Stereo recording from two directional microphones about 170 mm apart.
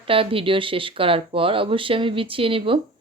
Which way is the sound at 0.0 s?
30° right (ahead or behind).